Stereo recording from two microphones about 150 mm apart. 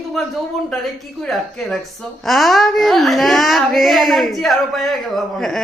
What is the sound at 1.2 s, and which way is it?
Speech, 5° left (ahead or behind).